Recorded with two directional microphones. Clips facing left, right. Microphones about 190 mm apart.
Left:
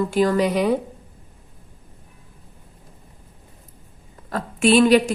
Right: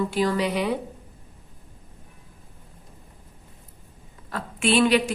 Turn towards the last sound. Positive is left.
turn(degrees=40)  # may be behind; listen again after turning